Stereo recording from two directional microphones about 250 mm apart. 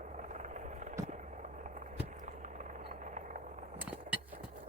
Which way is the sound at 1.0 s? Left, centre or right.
Right.